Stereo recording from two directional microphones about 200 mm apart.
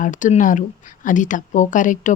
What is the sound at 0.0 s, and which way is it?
Speech, 40° left (ahead or behind).